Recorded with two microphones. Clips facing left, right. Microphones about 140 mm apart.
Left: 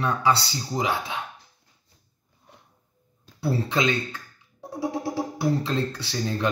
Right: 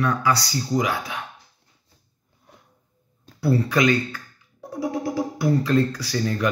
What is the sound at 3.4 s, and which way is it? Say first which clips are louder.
Speech: right 4 dB; 25° left (ahead or behind).